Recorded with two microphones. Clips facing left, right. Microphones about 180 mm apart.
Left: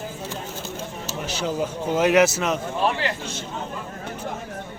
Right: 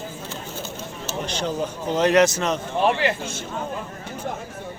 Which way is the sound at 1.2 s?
5° left (ahead or behind).